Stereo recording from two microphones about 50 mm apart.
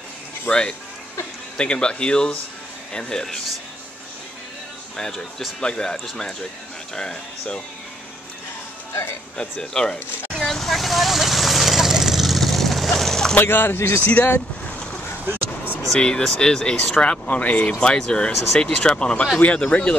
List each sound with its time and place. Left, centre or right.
0.5 s speech: centre
4.9 s speech: centre
7.0 s speech: centre
9.4 s vehicle: centre
13.4 s speech: left
14.0 s speech: left
15.2 s a sound: right
15.9 s speech: centre
17.7 s speech: centre